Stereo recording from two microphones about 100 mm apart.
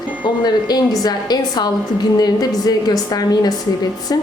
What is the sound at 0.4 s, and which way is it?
A woman's voice, 40° left (ahead or behind).